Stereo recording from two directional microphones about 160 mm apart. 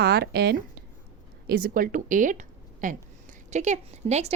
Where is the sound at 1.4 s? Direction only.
65° right (ahead or behind); by 4.3 s 45° right (ahead or behind).